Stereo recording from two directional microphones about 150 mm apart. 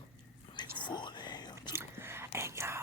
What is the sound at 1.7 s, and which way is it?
Whispering, 15° right (ahead or behind).